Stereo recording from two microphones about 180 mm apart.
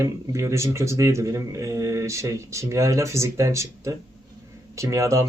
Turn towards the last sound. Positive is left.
turn(degrees=-15)  # may be behind; listen again after turning